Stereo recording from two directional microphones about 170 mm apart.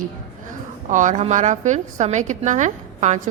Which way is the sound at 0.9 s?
45° right (ahead or behind).